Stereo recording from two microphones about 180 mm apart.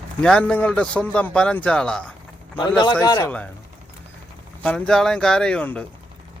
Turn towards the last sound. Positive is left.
turn(degrees=5)  # may be behind; listen again after turning